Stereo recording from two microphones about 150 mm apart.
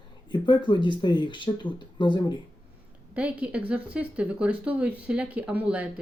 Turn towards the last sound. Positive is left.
turn(degrees=-10)  # may be behind; listen again after turning